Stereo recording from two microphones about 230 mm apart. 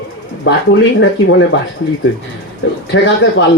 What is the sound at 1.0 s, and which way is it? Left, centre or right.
Speech, left.